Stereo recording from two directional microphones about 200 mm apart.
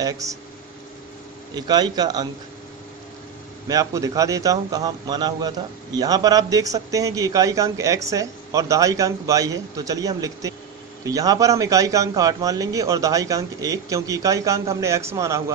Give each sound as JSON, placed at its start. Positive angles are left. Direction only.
{"t": 0.0, "sound": "a man's voice", "side_deg": -15}
{"t": 1.5, "sound": "a man's voice", "side_deg": -20}
{"t": 3.6, "sound": "a man's voice", "side_deg": -15}